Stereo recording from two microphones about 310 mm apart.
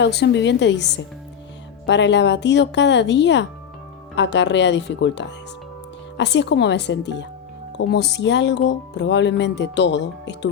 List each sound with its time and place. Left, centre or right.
0.0 s speech: left